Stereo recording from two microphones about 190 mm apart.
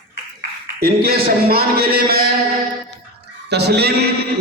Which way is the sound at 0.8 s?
55° right (ahead or behind).